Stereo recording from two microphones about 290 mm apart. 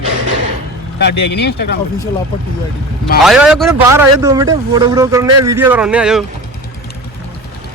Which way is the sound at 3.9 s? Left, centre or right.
Centre.